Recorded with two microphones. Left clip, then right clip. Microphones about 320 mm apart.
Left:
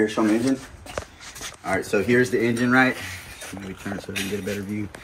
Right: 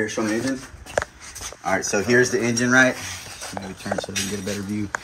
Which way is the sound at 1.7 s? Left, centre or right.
Right.